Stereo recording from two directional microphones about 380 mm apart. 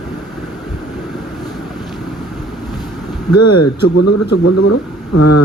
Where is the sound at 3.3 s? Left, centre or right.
Left.